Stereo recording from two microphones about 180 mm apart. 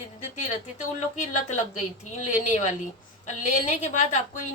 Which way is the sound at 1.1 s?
45° left (ahead or behind).